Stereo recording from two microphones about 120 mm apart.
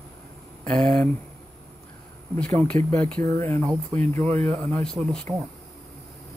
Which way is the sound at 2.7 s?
90° right.